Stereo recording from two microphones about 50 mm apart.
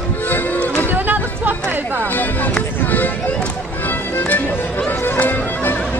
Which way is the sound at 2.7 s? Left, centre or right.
Left.